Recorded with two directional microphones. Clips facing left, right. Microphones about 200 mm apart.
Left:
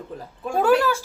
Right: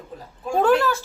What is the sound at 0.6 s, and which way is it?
Speech, 10° left (ahead or behind).